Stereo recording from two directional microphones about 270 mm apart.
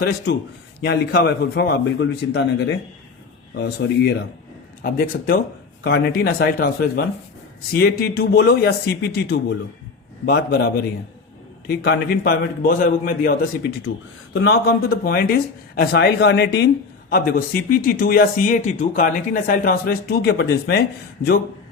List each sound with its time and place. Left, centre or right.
0.0 s a man's voice: left
11.7 s a man's voice: left